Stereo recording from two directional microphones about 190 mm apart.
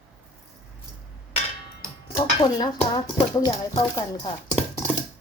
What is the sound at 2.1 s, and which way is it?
Speech, 25° left (ahead or behind).